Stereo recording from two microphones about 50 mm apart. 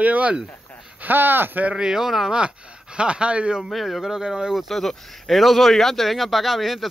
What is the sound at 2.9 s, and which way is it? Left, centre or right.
Speech, right.